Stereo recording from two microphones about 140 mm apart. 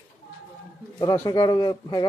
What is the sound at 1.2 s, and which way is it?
Speech, 30° left (ahead or behind).